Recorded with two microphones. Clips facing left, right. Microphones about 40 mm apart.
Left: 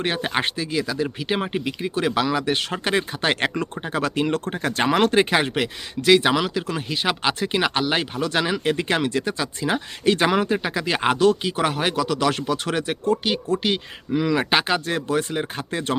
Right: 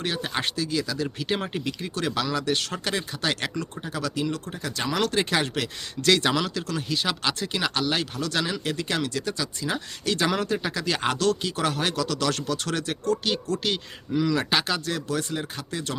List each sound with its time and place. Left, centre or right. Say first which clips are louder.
0.0 s speech: left 5 dB; left